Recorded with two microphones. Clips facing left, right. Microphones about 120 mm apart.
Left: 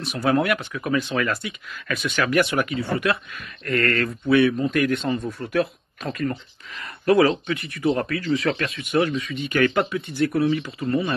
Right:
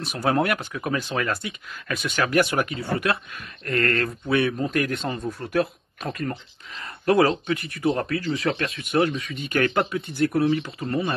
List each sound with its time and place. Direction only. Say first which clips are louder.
0.2 s speech: left 2 dB; 30° right (ahead or behind)
9.3 s speech: left 2 dB; 45° right (ahead or behind)
9.6 s speech: left 2 dB; 30° right (ahead or behind)